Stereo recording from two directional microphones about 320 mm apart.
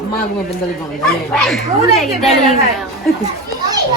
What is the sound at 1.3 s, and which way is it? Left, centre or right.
A man's voice, centre.